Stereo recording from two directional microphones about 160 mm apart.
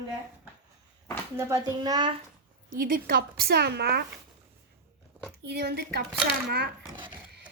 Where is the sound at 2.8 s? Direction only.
65° right (ahead or behind); by 4.1 s 85° right.